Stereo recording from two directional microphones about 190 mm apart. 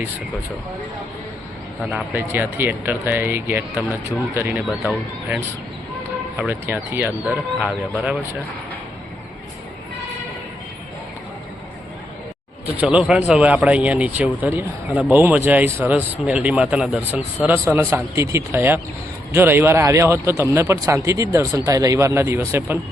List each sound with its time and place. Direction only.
1.8 s speech: centre (ahead or behind)
2.1 s speech: 10° right (ahead or behind)
12.6 s speech: 10° right (ahead or behind)